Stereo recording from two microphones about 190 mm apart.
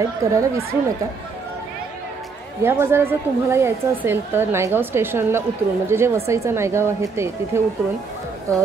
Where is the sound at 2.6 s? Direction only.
10° right (ahead or behind).